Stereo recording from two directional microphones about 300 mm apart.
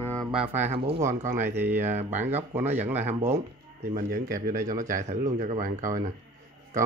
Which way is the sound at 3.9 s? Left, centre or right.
Right.